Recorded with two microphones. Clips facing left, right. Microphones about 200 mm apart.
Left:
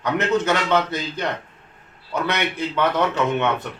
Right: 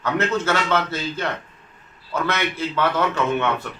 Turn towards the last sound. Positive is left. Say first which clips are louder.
# left 1 dB
turn(degrees=20)  # may be behind; listen again after turning